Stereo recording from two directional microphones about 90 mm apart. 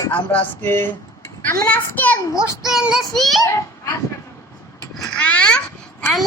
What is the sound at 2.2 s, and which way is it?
Speech, 35° left (ahead or behind).